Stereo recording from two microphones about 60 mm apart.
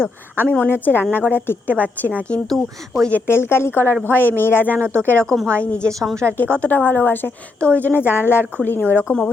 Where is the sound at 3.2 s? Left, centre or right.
Left.